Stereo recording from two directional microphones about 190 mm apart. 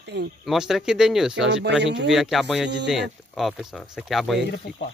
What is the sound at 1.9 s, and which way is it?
Speech, 70° right (ahead or behind).